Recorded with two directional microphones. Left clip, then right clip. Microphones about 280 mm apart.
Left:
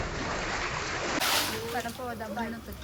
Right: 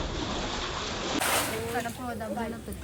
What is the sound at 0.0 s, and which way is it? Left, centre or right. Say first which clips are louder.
Waves: even; right.